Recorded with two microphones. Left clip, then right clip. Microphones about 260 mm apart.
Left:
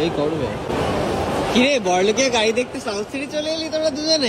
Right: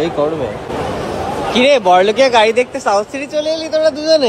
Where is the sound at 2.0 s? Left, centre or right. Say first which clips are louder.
Right 7 dB; centre.